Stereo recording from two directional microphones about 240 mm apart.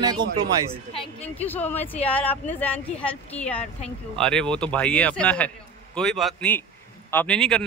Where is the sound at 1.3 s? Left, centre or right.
Centre.